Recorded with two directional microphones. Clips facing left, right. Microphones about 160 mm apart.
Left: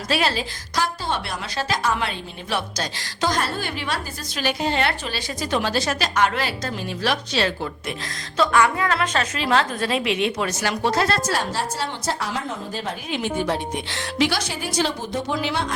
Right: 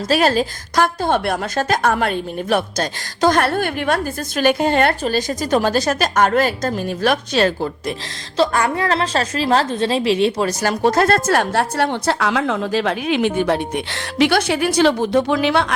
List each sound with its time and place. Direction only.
0.1 s a woman's voice: 45° right (ahead or behind); by 15.7 s 70° right (ahead or behind)